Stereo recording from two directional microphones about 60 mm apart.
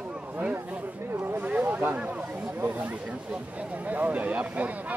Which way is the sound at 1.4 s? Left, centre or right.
Right.